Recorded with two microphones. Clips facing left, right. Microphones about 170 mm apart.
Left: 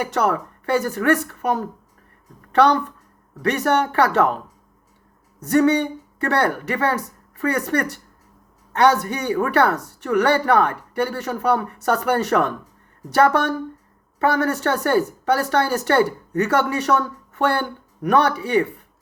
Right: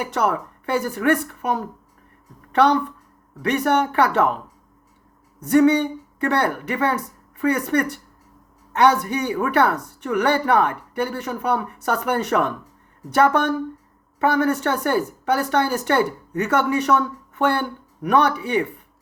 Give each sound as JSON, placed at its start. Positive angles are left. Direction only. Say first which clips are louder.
{"t": 0.0, "sound": "speech", "louder": "left 1 dB", "side_deg": 40}
{"t": 5.4, "sound": "speech", "louder": "right 1 dB", "side_deg": 40}